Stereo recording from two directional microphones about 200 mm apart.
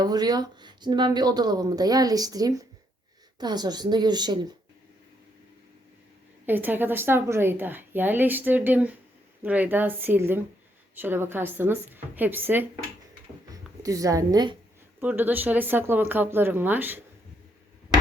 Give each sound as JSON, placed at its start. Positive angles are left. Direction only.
{"t": 0.0, "sound": "speech", "side_deg": -20}
{"t": 6.4, "sound": "a woman's voice", "side_deg": -10}
{"t": 15.0, "sound": "a woman's voice", "side_deg": -10}